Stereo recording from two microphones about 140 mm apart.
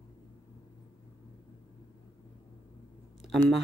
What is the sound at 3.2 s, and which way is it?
Speech, centre (ahead or behind).